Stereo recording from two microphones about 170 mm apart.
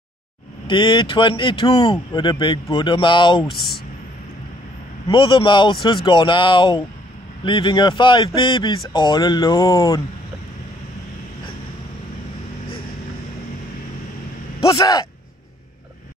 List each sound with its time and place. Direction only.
0.7 s speech: 30° left (ahead or behind)
3.4 s speech: centre (ahead or behind)
5.0 s speech: 30° left (ahead or behind)
14.8 s speech: 20° left (ahead or behind)